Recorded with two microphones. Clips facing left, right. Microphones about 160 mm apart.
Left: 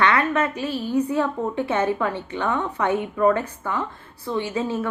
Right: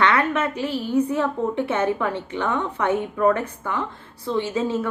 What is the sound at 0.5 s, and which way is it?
Speech, 20° right (ahead or behind).